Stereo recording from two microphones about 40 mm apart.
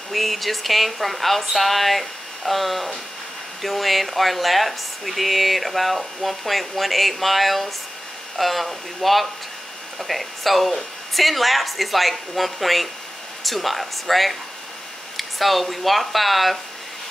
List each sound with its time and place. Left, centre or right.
0.1 s speech: centre